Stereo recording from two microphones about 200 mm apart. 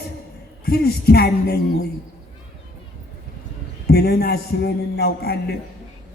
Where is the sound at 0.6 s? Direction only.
50° left (ahead or behind).